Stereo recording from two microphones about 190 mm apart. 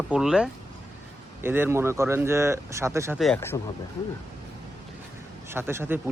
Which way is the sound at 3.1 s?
Centre (ahead or behind).